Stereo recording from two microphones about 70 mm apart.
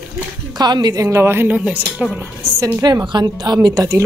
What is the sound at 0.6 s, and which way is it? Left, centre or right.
Speech, right.